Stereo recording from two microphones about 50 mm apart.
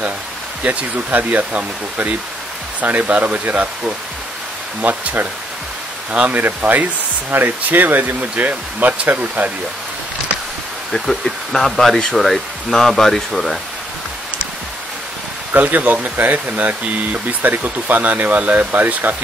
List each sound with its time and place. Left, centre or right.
0.7 s speech: right
4.8 s speech: right
6.1 s speech: right
10.9 s speech: centre
15.5 s speech: right